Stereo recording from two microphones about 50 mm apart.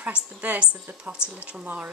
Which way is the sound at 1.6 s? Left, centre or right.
Right.